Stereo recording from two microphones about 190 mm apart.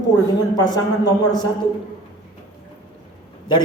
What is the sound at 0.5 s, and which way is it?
Speech, 20° left (ahead or behind).